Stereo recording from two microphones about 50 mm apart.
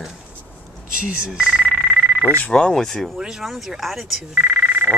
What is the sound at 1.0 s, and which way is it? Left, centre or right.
Speech, centre.